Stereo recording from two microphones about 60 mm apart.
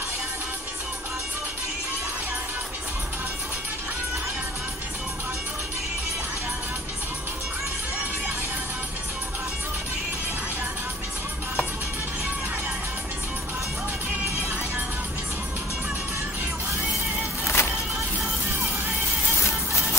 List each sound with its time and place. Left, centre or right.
17.5 s music: left
19.4 s music: left